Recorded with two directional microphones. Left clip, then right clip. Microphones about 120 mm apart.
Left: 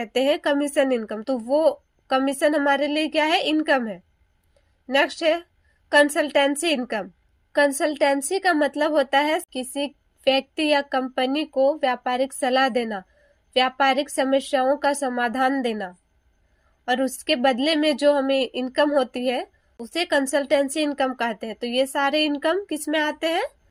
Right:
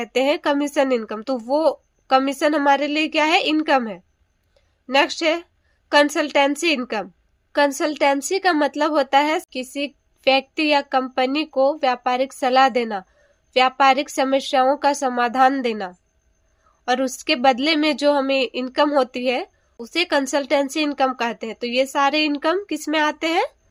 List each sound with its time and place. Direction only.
0.0 s speech: 25° right (ahead or behind)
4.5 s a sound: 25° right (ahead or behind)
5.9 s speech: 25° right (ahead or behind)